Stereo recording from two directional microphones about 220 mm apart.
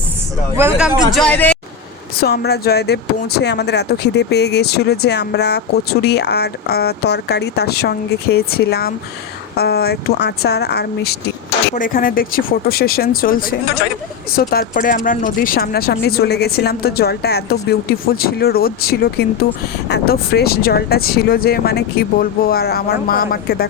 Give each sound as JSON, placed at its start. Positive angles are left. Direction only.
{"t": 0.5, "sound": "speech", "side_deg": -5}
{"t": 1.1, "sound": "speech", "side_deg": 5}
{"t": 2.1, "sound": "speech", "side_deg": 45}
{"t": 14.3, "sound": "speech", "side_deg": 45}